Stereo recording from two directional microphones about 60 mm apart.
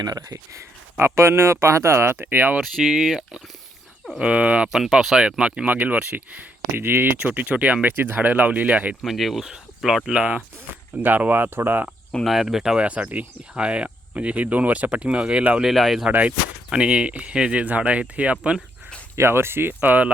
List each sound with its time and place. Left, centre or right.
0.0 s speech: right
0.9 s speech: right
2.6 s speech: centre
4.2 s speech: centre
4.7 s speech: centre; by 6.2 s right
6.7 s speech: right
9.0 s speech: centre
10.2 s speech: right
12.2 s speech: centre
12.7 s speech: centre
15.6 s speech: centre
16.0 s speech: right
19.1 s speech: right